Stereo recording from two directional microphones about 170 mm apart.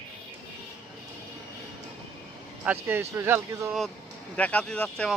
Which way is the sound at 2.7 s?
15° right (ahead or behind).